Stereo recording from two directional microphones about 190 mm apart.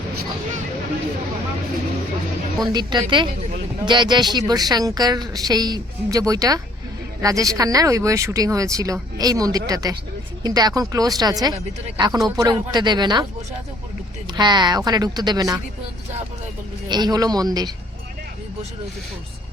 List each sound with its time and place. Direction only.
2.7 s speech: 25° right (ahead or behind)
14.3 s speech: 25° right (ahead or behind)
16.9 s speech: 20° right (ahead or behind)